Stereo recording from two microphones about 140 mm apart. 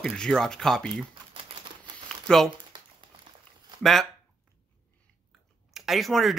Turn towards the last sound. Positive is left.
turn(degrees=0)  # may be behind; listen again after turning